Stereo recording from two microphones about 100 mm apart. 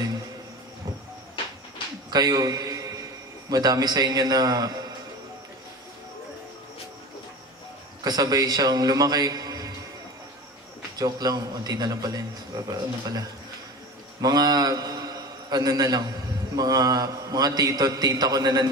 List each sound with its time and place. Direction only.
2.0 s a sound: 40° right (ahead or behind)
3.4 s a man's voice: 40° right (ahead or behind)
8.0 s a man's voice: 40° right (ahead or behind)
11.0 s a man's voice: 40° right (ahead or behind)
14.2 s a man's voice: 40° right (ahead or behind)